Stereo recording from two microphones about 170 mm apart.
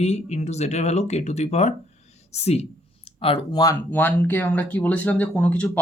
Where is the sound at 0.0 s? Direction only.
40° left (ahead or behind).